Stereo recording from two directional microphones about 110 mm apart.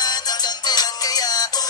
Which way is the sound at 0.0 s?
40° left (ahead or behind).